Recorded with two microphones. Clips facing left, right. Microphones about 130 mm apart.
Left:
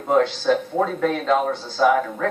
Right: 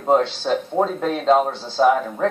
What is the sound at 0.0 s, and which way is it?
Speech, 30° right (ahead or behind).